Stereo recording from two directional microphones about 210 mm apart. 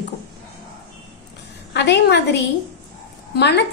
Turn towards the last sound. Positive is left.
turn(degrees=55)  # may be behind; listen again after turning